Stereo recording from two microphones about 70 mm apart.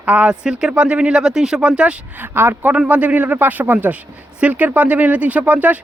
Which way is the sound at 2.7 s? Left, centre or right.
Centre.